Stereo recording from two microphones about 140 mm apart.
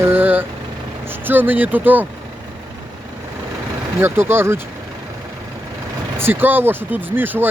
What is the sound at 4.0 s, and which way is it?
Speech, 15° right (ahead or behind).